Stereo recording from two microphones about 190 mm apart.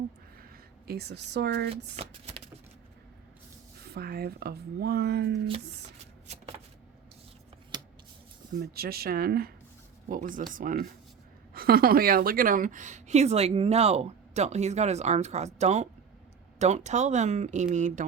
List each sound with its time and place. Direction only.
0.5 s speech: 55° right (ahead or behind)
1.7 s a woman's voice: 30° right (ahead or behind)
3.8 s speech: 55° right (ahead or behind)
7.7 s scissors: 25° right (ahead or behind)
8.5 s a woman's voice: 55° right (ahead or behind)